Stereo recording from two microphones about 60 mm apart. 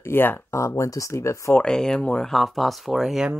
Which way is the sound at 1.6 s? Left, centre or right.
Centre.